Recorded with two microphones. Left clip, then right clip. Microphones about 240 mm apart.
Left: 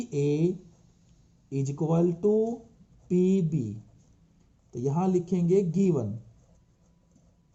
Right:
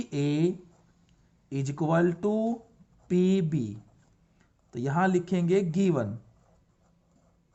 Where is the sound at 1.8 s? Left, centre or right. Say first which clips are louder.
Even; right.